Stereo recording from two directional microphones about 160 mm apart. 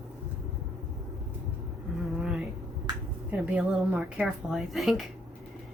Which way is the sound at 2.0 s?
Centre (ahead or behind).